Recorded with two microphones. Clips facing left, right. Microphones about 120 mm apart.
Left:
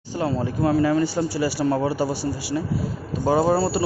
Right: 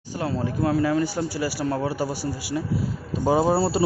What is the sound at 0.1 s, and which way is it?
A man's voice, centre (ahead or behind).